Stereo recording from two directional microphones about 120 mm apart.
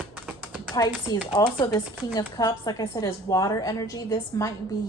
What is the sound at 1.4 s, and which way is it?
A woman's voice, 30° left (ahead or behind).